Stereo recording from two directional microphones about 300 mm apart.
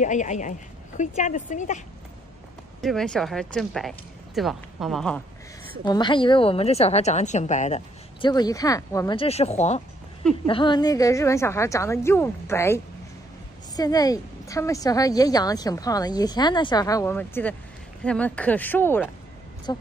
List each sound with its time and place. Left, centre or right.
0.0 s a woman's voice: left
2.8 s speech: centre
5.9 s a woman's voice: centre